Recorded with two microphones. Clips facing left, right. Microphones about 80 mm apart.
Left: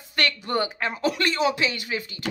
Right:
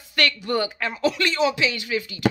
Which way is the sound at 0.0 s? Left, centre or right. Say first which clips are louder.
Right 2 dB; left.